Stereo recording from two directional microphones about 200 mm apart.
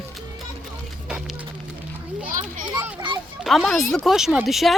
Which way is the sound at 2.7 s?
20° right (ahead or behind).